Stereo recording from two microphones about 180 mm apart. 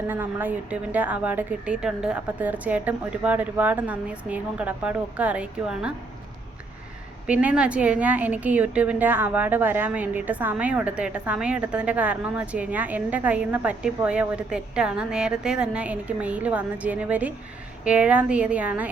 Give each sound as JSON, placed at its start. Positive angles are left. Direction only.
{"t": 0.1, "sound": "a woman's voice", "side_deg": -10}
{"t": 7.3, "sound": "a woman's voice", "side_deg": -5}